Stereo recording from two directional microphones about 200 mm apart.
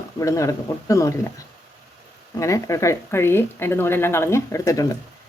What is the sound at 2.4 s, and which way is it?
Speech, 15° left (ahead or behind).